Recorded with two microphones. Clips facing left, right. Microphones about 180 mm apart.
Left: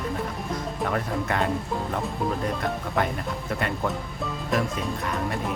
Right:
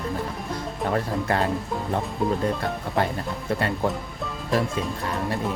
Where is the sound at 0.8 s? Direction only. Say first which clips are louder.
Right 3 dB; 30° right (ahead or behind).